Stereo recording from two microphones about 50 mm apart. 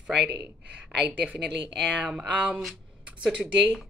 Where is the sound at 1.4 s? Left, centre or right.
Centre.